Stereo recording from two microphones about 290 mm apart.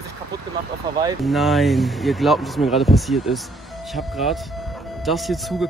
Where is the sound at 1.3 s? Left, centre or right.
Centre.